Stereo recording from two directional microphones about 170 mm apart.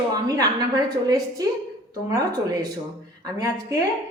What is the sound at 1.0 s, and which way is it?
A woman's voice, 20° right (ahead or behind).